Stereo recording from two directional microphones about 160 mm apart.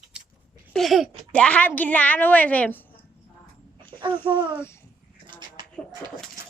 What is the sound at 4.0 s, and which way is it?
Speech, 30° right (ahead or behind).